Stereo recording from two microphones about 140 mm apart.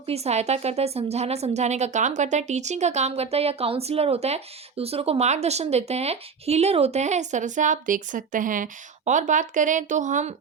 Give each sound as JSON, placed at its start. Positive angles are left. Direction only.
{"t": 0.0, "sound": "a woman's voice", "side_deg": -45}